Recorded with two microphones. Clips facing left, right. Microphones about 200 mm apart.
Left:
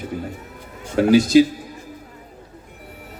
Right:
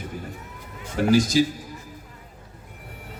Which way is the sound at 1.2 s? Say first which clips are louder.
Left 8 dB; 60° left (ahead or behind).